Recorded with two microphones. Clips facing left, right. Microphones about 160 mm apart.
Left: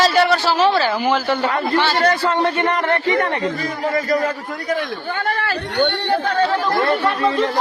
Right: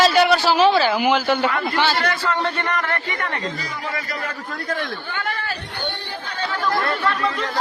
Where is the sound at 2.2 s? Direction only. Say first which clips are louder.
Left 5 dB; 20° left (ahead or behind).